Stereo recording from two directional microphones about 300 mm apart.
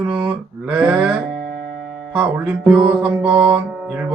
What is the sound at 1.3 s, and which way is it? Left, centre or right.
Music, right.